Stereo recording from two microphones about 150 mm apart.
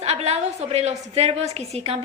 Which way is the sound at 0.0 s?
45° right (ahead or behind).